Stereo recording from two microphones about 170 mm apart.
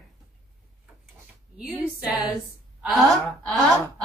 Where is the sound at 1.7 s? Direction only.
5° right (ahead or behind).